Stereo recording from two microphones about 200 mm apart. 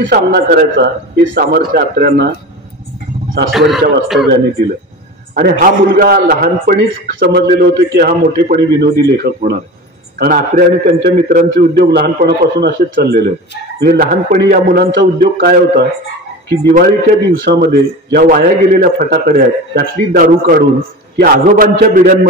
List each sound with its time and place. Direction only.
0.0 s a man's voice: 50° right (ahead or behind)
3.5 s a man's voice: centre (ahead or behind)
5.3 s a man's voice: 45° right (ahead or behind)